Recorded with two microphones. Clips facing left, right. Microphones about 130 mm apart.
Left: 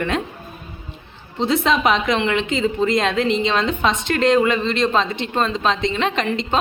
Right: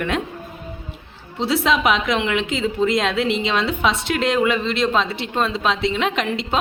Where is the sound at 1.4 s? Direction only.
5° right (ahead or behind).